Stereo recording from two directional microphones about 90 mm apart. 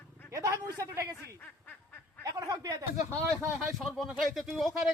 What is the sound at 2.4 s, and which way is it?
Speech, 40° right (ahead or behind).